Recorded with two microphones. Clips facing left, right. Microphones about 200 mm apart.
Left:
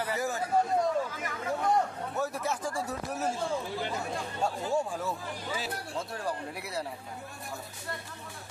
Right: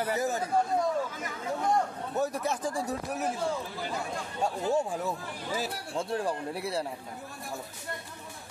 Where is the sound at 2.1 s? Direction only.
15° right (ahead or behind).